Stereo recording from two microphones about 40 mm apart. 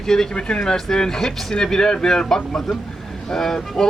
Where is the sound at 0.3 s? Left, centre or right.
Left.